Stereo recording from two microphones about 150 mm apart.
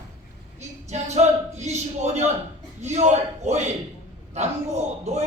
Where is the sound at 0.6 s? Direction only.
50° right (ahead or behind).